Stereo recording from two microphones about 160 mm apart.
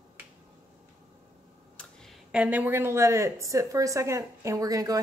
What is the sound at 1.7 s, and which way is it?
Speech, centre (ahead or behind).